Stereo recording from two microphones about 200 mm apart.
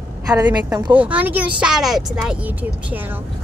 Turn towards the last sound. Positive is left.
turn(degrees=-10)  # may be behind; listen again after turning